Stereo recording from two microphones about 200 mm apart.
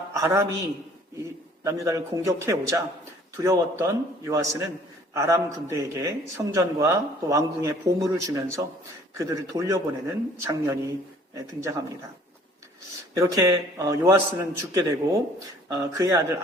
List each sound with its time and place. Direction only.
0.1 s a sound: 15° right (ahead or behind)
1.6 s speech: 15° right (ahead or behind)
13.1 s speech: 15° right (ahead or behind)